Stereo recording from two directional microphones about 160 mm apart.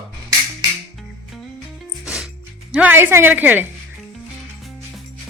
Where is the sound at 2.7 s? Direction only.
10° right (ahead or behind).